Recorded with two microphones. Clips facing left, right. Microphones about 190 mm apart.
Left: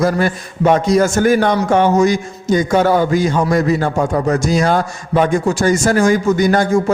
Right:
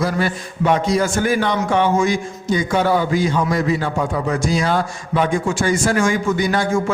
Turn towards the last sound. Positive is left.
turn(degrees=45)  # may be behind; listen again after turning